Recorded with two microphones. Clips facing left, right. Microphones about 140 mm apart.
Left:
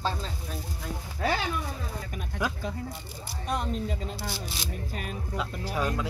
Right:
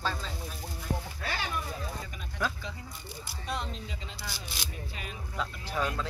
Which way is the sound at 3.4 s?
50° left (ahead or behind).